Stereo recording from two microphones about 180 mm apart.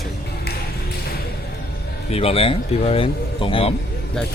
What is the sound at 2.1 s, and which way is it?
Speech, 35° left (ahead or behind).